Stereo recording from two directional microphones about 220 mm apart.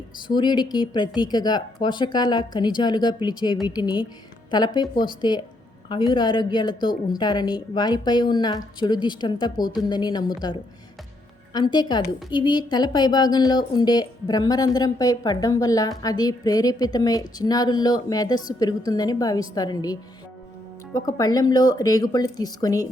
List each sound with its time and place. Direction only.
0.3 s a woman's voice: 20° left (ahead or behind)